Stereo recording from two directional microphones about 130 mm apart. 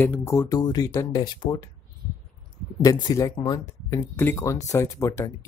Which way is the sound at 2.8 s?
25° left (ahead or behind).